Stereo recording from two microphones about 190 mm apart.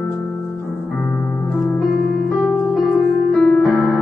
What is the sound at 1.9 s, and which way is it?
Keyboard, 55° left (ahead or behind).